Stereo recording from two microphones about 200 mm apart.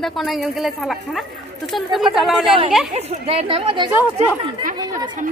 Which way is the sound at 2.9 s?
30° right (ahead or behind).